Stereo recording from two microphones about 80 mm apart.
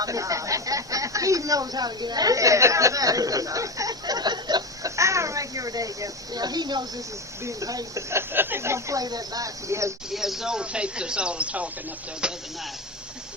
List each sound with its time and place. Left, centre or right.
0.0 s a sound: right
4.9 s a sound: right
7.4 s speech: right
8.1 s speech: right
9.0 s speech: right
10.1 s speech: centre